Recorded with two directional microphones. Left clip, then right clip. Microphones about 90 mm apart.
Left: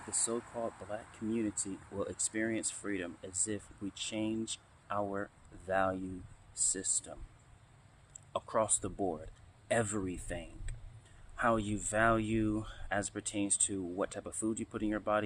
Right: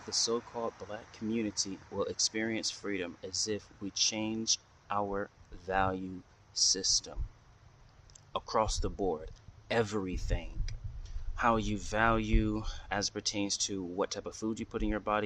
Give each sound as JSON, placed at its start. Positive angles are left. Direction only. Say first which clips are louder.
{"t": 0.1, "sound": "speech", "louder": "right 6 dB", "side_deg": -40}
{"t": 8.3, "sound": "speech", "louder": "right 2 dB", "side_deg": -40}
{"t": 9.2, "sound": "a sound", "louder": "right 1 dB", "side_deg": -40}
{"t": 9.8, "sound": "speech", "louder": "right 3 dB", "side_deg": -50}
{"t": 14.5, "sound": "speech", "louder": "right 3 dB", "side_deg": -45}